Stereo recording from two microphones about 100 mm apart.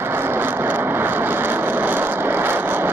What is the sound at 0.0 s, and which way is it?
Vehicle, 25° right (ahead or behind).